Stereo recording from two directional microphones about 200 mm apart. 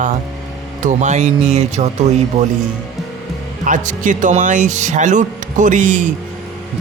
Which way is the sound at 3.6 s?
40° right (ahead or behind).